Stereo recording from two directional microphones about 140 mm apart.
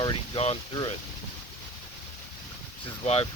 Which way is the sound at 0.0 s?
40° left (ahead or behind).